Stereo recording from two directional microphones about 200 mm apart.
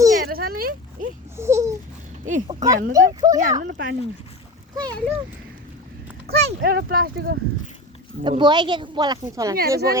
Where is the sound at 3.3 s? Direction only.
40° right (ahead or behind).